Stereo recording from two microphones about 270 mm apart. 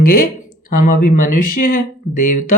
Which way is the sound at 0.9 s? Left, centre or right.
Left.